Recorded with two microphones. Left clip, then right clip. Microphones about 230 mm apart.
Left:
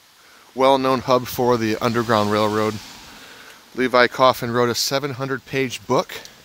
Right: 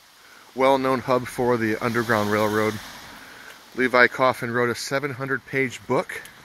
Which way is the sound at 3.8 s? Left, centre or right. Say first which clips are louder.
Left 2 dB; centre.